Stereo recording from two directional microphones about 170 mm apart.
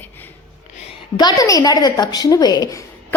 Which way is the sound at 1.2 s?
25° left (ahead or behind).